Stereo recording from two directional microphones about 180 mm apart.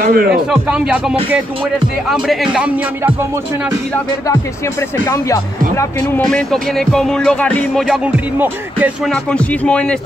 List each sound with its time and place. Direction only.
0.0 s speech: 55° right (ahead or behind)
0.3 s speech: 5° right (ahead or behind)
2.2 s speech: 5° right (ahead or behind)
5.0 s speech: 15° left (ahead or behind); by 8.1 s centre (ahead or behind)
8.4 s music: 10° right (ahead or behind)
9.1 s speech: 5° left (ahead or behind)